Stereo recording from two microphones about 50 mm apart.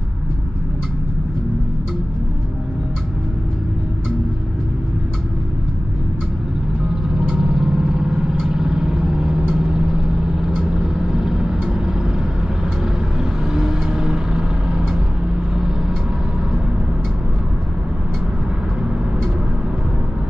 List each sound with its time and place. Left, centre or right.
7.2 s vehicle: centre
13.2 s vehicle: centre